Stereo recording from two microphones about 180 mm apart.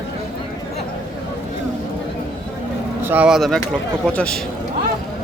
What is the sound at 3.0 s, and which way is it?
A man's voice, 10° right (ahead or behind).